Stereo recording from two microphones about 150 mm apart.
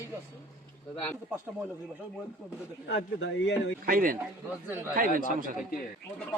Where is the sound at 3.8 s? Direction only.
70° right (ahead or behind).